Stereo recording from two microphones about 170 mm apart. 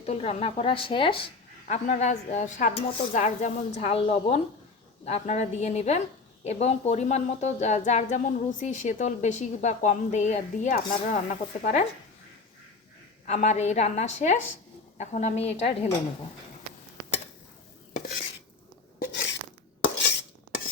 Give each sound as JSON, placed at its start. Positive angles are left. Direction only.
{"t": 0.0, "sound": "speech", "side_deg": 35}
{"t": 1.6, "sound": "a woman's voice", "side_deg": 45}
{"t": 13.2, "sound": "a woman's voice", "side_deg": 40}
{"t": 19.8, "sound": "a sound", "side_deg": 80}